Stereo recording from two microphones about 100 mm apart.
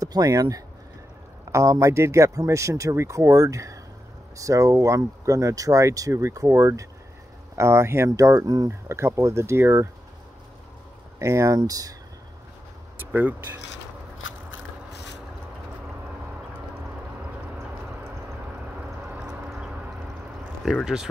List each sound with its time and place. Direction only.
0.0 s speech: 35° right (ahead or behind)
11.1 s speech: 30° right (ahead or behind)
12.9 s speech: 20° right (ahead or behind)
19.0 s clip-clop: 15° right (ahead or behind)
19.5 s a sound: 5° right (ahead or behind)
20.8 s speech: 5° right (ahead or behind)